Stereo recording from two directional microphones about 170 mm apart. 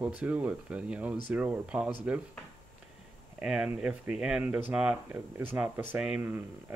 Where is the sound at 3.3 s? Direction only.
5° right (ahead or behind).